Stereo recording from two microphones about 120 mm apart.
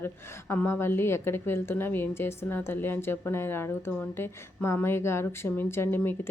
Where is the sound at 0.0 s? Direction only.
20° left (ahead or behind).